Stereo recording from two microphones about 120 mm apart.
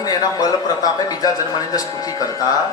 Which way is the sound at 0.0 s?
35° left (ahead or behind).